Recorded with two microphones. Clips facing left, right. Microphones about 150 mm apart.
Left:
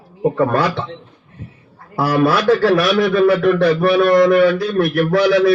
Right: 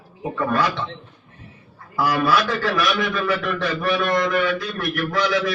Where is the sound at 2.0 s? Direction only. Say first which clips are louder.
Left 4 dB; 35° left (ahead or behind).